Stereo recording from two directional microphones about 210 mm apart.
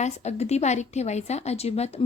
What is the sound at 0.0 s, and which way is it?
A woman's voice, 30° left (ahead or behind).